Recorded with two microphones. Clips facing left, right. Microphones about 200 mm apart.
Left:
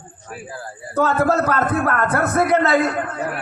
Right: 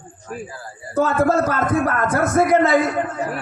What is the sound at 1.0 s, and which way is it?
Speech, 65° left (ahead or behind).